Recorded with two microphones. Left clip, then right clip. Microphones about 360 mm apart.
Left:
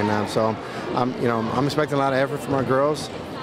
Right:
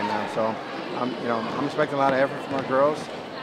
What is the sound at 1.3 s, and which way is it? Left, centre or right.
Speech, left.